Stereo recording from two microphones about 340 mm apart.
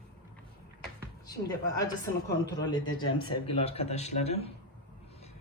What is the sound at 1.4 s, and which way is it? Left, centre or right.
Speech, centre.